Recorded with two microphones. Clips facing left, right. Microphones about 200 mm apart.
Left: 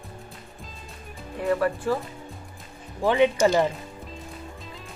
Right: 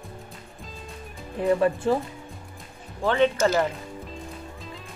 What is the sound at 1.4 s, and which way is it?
Speech, 20° right (ahead or behind).